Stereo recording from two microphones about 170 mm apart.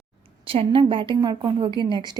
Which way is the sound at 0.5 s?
30° right (ahead or behind).